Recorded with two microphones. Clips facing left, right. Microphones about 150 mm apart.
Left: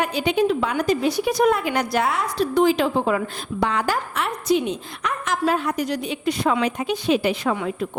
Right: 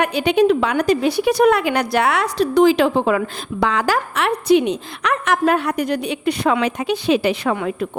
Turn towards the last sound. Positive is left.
turn(degrees=-70)  # may be behind; listen again after turning